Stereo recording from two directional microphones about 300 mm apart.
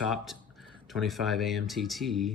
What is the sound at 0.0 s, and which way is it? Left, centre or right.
Speech, centre.